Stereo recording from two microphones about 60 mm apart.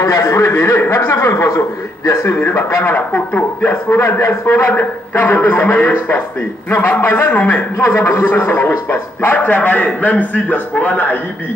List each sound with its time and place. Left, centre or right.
0.0 s a man's voice: left
2.2 s a man's voice: left
2.8 s a man's voice: left
4.7 s a man's voice: left